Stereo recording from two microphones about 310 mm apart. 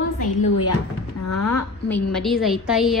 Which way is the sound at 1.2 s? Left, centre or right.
Left.